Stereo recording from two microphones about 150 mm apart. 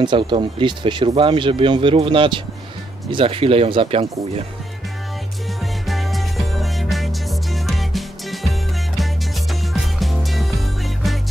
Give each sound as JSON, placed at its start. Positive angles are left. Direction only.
{"t": 0.0, "sound": "speech", "side_deg": -30}
{"t": 5.6, "sound": "music", "side_deg": 0}